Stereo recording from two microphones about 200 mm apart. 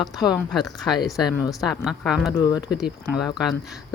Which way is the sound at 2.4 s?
20° left (ahead or behind).